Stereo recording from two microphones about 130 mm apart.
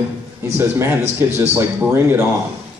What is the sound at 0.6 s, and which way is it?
A man's voice, 20° right (ahead or behind).